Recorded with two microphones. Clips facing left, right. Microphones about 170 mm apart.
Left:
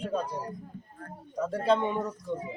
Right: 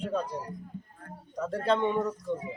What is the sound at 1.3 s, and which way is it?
Speech, centre (ahead or behind).